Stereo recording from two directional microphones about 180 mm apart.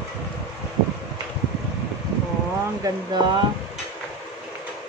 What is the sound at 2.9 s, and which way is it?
Speech, 20° right (ahead or behind).